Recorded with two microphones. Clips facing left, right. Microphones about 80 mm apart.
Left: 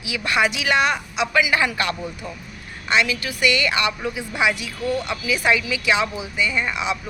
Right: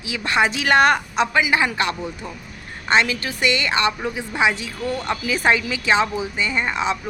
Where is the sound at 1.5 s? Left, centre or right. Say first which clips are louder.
Right 1 dB; right.